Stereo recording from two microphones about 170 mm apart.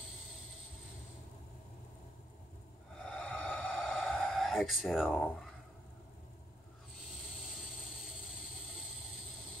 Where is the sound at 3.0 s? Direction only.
5° left (ahead or behind).